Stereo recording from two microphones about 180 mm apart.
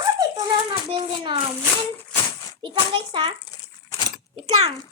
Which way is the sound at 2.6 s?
25° right (ahead or behind).